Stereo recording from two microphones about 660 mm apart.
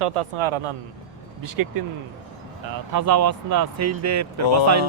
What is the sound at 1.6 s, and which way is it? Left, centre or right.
Speech, right.